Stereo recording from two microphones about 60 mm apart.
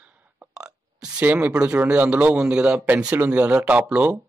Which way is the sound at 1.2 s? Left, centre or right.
Right.